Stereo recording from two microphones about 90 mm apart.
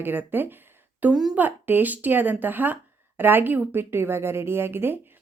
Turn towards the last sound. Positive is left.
turn(degrees=-25)  # may be behind; listen again after turning